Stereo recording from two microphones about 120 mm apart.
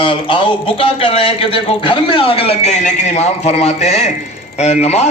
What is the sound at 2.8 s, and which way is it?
A man's voice, 75° left (ahead or behind).